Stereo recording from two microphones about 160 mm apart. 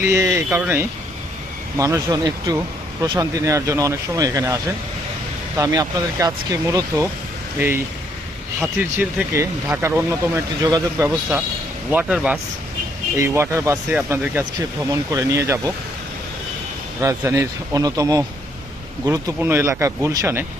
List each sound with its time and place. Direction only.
0.1 s speech: 20° right (ahead or behind)
8.8 s speech: 10° right (ahead or behind)
11.9 s speech: 5° right (ahead or behind)
17.0 s speech: 20° right (ahead or behind)